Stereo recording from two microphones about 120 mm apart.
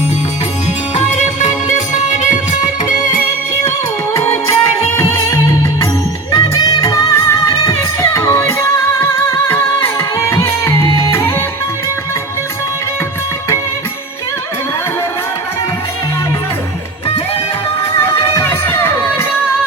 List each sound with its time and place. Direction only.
0.9 s music: 75° left (ahead or behind)
4.1 s music: 25° left (ahead or behind)
18.0 s music: 20° left (ahead or behind)